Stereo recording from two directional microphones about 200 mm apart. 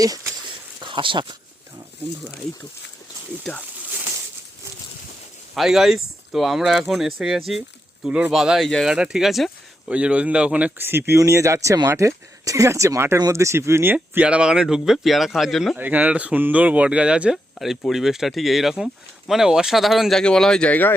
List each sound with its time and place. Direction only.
0.9 s speech: 25° right (ahead or behind)
5.5 s speech: centre (ahead or behind)